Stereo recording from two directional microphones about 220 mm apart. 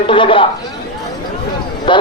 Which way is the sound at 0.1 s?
25° left (ahead or behind).